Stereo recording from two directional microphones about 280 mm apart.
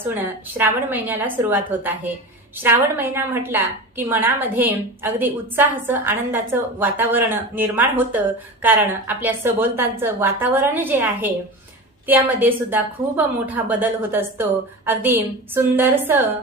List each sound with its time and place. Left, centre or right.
0.0 s a woman's voice: centre